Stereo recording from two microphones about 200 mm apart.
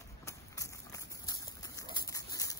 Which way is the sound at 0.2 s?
15° left (ahead or behind).